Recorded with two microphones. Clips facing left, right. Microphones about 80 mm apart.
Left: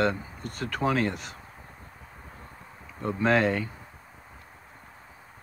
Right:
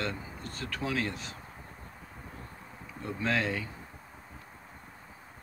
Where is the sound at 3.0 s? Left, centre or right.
Left.